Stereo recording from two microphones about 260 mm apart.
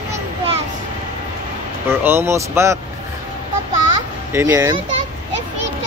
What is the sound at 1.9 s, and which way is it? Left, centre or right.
Speech, centre.